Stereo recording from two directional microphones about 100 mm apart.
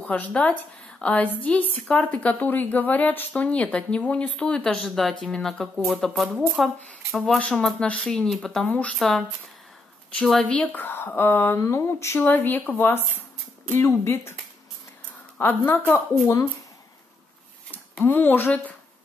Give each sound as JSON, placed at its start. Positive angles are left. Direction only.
{"t": 0.0, "sound": "a woman's voice", "side_deg": 15}
{"t": 7.2, "sound": "a woman's voice", "side_deg": 10}
{"t": 8.9, "sound": "speech", "side_deg": 0}
{"t": 10.6, "sound": "speech", "side_deg": 15}
{"t": 15.3, "sound": "speech", "side_deg": 20}
{"t": 18.0, "sound": "speech", "side_deg": 20}